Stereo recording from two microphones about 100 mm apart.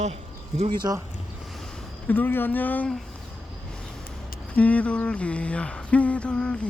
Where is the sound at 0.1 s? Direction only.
90° right.